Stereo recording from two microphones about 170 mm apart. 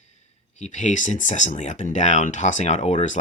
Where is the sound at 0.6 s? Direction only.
45° left (ahead or behind).